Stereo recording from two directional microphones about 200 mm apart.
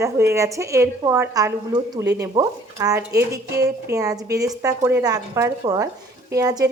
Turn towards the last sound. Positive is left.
turn(degrees=-20)  # may be behind; listen again after turning